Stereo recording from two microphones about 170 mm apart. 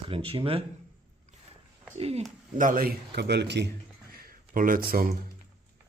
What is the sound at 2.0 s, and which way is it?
Speech, 35° right (ahead or behind).